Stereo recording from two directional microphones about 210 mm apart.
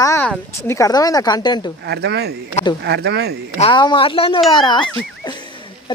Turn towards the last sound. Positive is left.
turn(degrees=20)  # may be behind; listen again after turning